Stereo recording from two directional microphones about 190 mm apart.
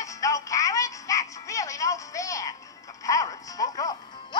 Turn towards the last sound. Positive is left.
turn(degrees=20)  # may be behind; listen again after turning